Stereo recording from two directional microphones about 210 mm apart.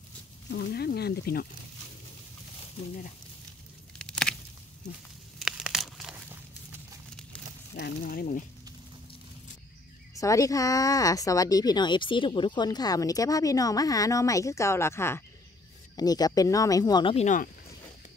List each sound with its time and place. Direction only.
0.5 s speech: 50° left (ahead or behind)
4.0 s a sound: 5° left (ahead or behind)
5.4 s crumpling: centre (ahead or behind)
8.0 s speech: 45° left (ahead or behind)
10.1 s speech: 15° left (ahead or behind); by 17.5 s 35° left (ahead or behind)